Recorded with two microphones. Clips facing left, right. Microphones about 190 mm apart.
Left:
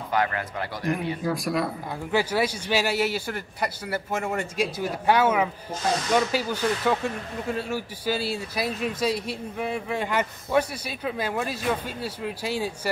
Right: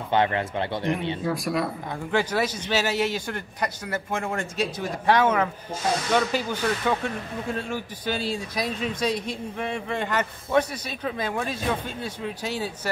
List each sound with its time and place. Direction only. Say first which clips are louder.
0.1 s speech: right 3 dB; 25° right (ahead or behind)
1.2 s a man's voice: left 1 dB; centre (ahead or behind)